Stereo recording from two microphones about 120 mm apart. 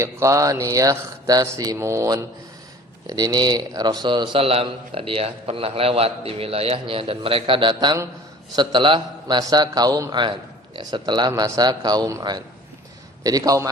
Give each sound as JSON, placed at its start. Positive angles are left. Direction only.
{"t": 0.0, "sound": "a man's voice", "side_deg": -25}